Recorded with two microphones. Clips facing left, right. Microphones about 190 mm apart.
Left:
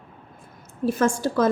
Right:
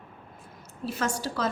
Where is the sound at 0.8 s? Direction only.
50° left (ahead or behind).